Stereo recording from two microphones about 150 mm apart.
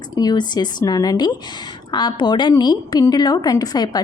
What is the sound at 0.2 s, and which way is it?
A woman's voice, 25° left (ahead or behind).